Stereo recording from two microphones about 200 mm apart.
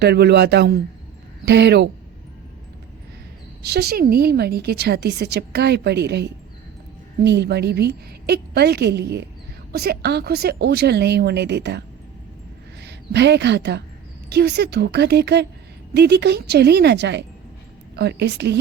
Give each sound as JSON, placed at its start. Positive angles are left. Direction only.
{"t": 0.0, "sound": "a woman's voice", "side_deg": -55}
{"t": 3.6, "sound": "a woman's voice", "side_deg": -55}
{"t": 12.8, "sound": "a woman's voice", "side_deg": -60}